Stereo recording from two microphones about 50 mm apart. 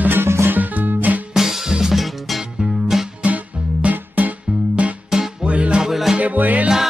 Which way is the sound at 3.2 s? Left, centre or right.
Right.